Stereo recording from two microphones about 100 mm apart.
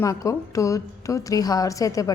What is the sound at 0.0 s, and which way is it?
A woman's voice, 35° left (ahead or behind).